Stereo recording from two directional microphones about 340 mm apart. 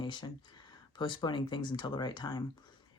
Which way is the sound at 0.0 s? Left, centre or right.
Centre.